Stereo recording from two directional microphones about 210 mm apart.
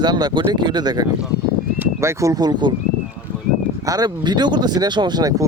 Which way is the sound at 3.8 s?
15° right (ahead or behind).